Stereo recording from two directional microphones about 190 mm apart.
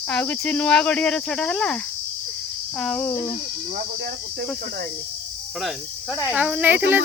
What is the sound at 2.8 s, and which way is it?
Speech, 5° left (ahead or behind).